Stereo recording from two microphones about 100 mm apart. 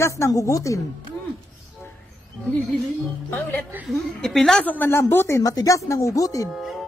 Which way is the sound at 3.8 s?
Centre (ahead or behind).